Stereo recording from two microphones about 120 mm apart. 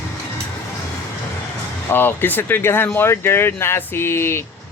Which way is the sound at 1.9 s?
15° left (ahead or behind).